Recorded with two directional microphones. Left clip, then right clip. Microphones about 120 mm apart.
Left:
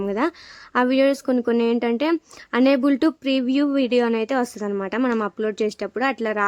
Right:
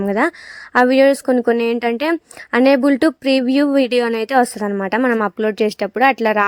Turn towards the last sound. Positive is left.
turn(degrees=-40)  # may be behind; listen again after turning